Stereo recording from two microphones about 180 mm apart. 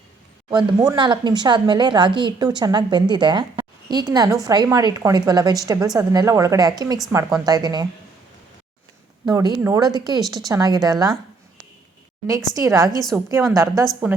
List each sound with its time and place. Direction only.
0.5 s speech: 20° right (ahead or behind)
9.2 s speech: 20° right (ahead or behind)
10.2 s speech: centre (ahead or behind)
10.5 s speech: 20° right (ahead or behind)
12.5 s a woman's voice: 20° right (ahead or behind)